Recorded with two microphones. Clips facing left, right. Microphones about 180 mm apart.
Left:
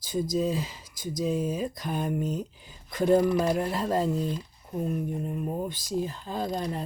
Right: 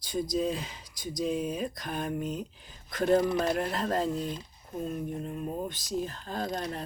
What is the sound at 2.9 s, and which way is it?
Speech, 15° left (ahead or behind).